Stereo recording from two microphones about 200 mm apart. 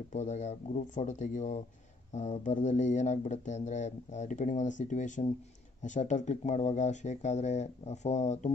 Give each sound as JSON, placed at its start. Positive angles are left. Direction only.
{"t": 0.1, "sound": "speech", "side_deg": 35}